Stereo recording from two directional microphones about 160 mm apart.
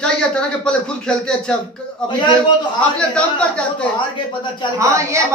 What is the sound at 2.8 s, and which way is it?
Speech, 5° left (ahead or behind).